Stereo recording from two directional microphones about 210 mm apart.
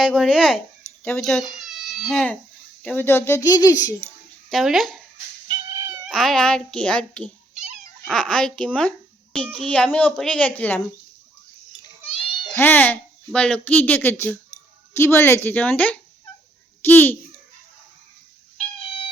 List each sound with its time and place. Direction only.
0.0 s a child's voice: centre (ahead or behind); by 3.9 s 15° left (ahead or behind)
4.4 s speech: centre (ahead or behind)
5.5 s cat: 15° right (ahead or behind)
6.1 s a child's voice: centre (ahead or behind)
11.8 s a sound: 25° left (ahead or behind)
12.5 s speech: 10° left (ahead or behind)